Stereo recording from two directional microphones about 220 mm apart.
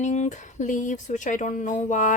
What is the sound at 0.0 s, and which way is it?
Speech, 30° left (ahead or behind).